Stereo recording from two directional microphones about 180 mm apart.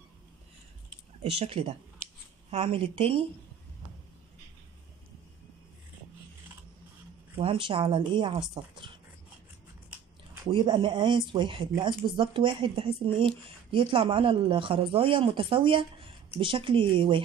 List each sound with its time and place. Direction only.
1.2 s a woman's voice: 35° right (ahead or behind)
7.3 s speech: 30° right (ahead or behind)
10.5 s speech: 25° right (ahead or behind)